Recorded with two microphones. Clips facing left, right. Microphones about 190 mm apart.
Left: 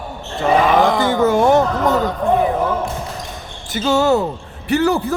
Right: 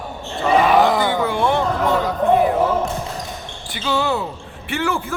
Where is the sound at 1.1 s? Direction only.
45° left (ahead or behind).